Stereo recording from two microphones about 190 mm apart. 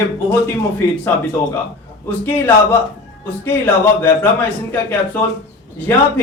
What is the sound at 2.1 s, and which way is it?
Speech, 10° left (ahead or behind).